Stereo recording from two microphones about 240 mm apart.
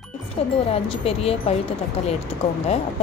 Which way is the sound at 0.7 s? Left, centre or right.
Left.